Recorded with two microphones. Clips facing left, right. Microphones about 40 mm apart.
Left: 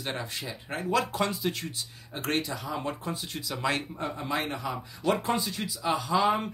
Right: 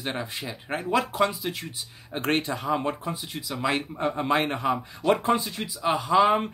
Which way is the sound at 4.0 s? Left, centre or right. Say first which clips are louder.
Right 7 dB; right.